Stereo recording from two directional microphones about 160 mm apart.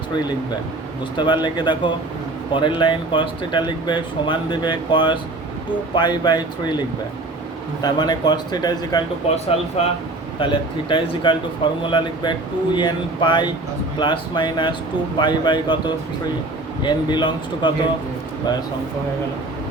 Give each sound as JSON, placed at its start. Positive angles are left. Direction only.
{"t": 1.1, "sound": "speech", "side_deg": 30}
{"t": 9.3, "sound": "speech", "side_deg": 40}